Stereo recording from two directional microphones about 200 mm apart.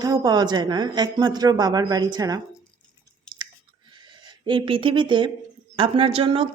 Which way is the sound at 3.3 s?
20° right (ahead or behind).